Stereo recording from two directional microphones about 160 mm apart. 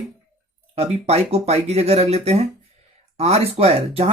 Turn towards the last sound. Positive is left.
turn(degrees=-40)  # may be behind; listen again after turning